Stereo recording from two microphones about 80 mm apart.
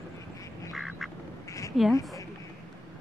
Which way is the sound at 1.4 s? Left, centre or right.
Left.